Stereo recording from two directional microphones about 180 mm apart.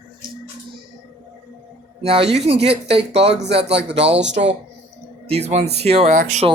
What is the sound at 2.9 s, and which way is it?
Speech, 70° right (ahead or behind).